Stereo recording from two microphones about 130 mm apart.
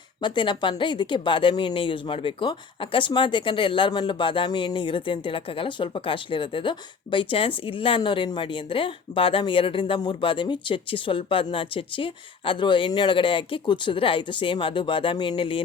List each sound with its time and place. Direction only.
0.2 s speech: 35° left (ahead or behind)